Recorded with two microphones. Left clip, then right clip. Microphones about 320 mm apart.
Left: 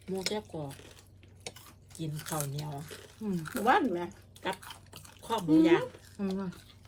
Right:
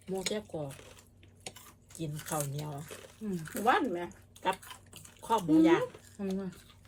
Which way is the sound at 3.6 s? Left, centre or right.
Centre.